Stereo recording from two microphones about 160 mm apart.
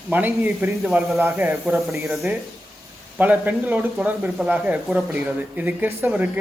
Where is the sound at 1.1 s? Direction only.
15° right (ahead or behind).